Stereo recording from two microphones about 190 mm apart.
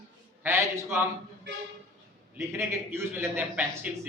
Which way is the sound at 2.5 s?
15° right (ahead or behind).